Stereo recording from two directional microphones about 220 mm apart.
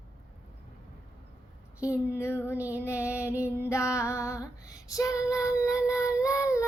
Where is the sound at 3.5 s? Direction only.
10° left (ahead or behind).